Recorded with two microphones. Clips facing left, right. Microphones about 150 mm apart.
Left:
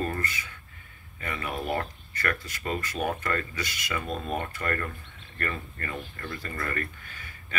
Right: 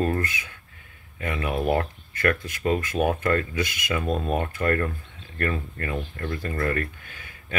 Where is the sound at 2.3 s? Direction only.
55° right (ahead or behind).